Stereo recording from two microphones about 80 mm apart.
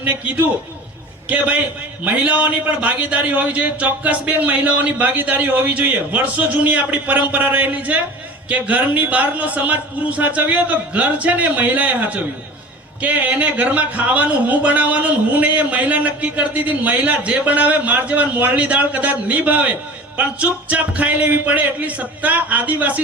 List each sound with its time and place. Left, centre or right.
0.0 s speech: right